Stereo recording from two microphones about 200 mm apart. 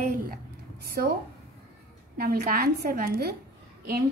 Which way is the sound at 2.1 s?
50° right (ahead or behind).